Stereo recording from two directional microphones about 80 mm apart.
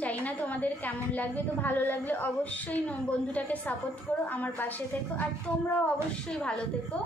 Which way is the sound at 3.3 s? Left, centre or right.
Centre.